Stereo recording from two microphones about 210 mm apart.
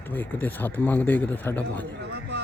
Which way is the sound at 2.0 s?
55° right (ahead or behind).